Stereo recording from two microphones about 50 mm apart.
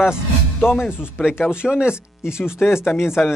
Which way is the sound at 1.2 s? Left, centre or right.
Centre.